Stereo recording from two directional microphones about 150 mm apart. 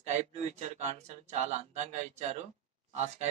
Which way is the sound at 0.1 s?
45° right (ahead or behind).